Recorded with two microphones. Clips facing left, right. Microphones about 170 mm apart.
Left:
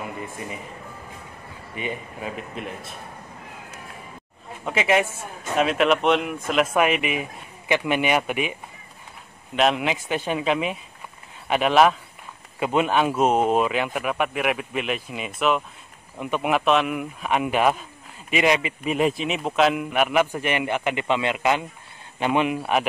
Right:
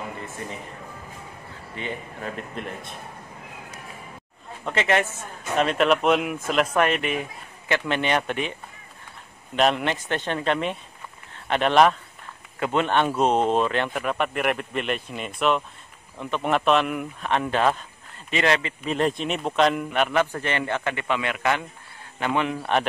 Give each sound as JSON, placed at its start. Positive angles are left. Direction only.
{"t": 1.8, "sound": "speech", "side_deg": 10}
{"t": 4.6, "sound": "speech", "side_deg": 10}
{"t": 9.6, "sound": "speech", "side_deg": 5}